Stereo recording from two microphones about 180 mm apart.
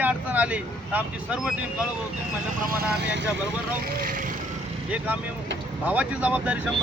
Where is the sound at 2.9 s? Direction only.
75° right (ahead or behind).